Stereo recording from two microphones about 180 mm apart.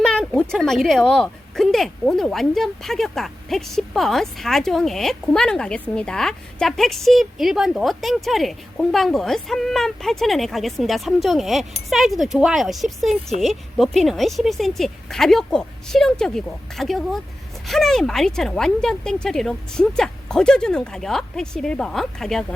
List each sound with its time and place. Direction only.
0.0 s a woman's voice: 5° left (ahead or behind)